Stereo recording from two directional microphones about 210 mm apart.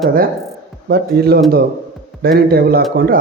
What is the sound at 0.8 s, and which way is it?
Speech, 50° right (ahead or behind).